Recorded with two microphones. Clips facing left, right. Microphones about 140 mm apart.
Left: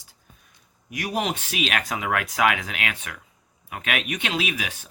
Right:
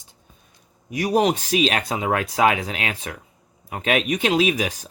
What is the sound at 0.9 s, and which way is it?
Speech, 35° right (ahead or behind).